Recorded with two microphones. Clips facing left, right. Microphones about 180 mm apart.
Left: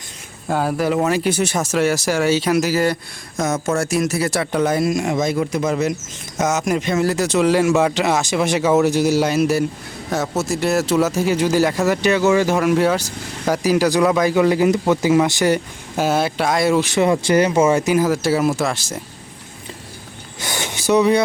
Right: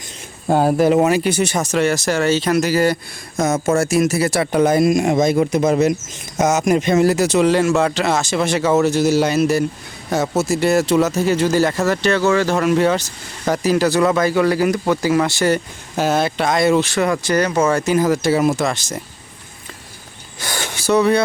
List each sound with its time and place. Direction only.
0.4 s speech: 30° right (ahead or behind)
1.0 s a man's voice: centre (ahead or behind)
7.8 s speech: 15° left (ahead or behind)
16.9 s speech: 25° left (ahead or behind)
17.5 s speech: 10° left (ahead or behind)
20.4 s gasp: 20° left (ahead or behind)